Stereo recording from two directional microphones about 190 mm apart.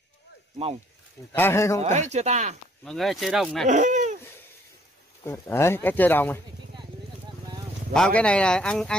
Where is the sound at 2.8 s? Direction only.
Centre (ahead or behind).